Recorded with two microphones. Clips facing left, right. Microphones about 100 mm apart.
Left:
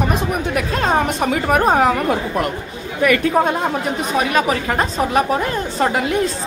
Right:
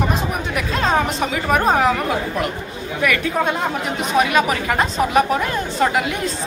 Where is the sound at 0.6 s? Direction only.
50° left (ahead or behind).